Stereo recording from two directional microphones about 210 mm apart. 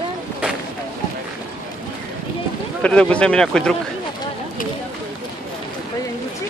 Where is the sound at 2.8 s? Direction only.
5° left (ahead or behind).